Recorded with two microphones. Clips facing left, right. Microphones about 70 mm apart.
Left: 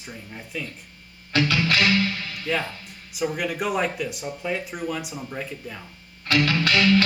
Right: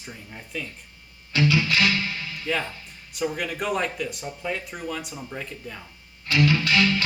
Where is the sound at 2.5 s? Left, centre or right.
Centre.